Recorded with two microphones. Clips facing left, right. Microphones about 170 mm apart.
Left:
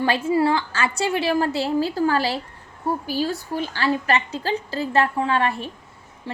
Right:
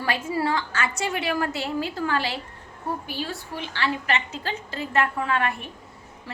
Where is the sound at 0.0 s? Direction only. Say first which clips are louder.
Left 6 dB; 30° left (ahead or behind).